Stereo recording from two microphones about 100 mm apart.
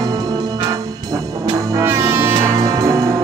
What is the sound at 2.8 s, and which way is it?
Music, 35° right (ahead or behind).